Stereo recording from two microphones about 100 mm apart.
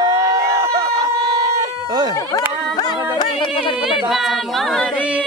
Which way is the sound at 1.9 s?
45° right (ahead or behind).